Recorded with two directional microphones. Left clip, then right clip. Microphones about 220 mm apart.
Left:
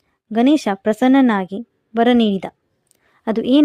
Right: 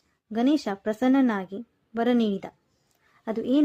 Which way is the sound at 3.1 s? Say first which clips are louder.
Left 9 dB; 45° left (ahead or behind).